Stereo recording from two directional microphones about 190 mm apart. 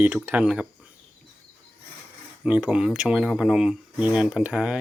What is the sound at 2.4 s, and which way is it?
Speech, 5° right (ahead or behind).